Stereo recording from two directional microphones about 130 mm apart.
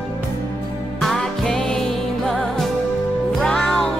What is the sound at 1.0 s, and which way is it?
Music, 5° left (ahead or behind).